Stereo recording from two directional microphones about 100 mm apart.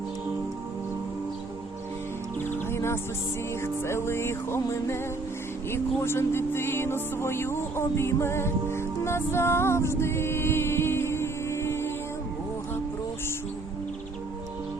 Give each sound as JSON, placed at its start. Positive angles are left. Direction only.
{"t": 2.4, "sound": "music", "side_deg": 20}
{"t": 5.7, "sound": "speech", "side_deg": 25}